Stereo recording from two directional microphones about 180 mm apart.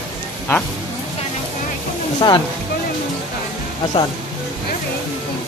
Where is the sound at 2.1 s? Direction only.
25° left (ahead or behind).